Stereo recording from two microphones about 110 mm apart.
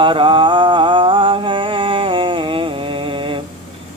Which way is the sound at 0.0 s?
50° right (ahead or behind).